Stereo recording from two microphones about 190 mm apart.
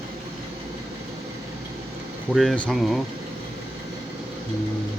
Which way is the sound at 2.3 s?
Centre (ahead or behind).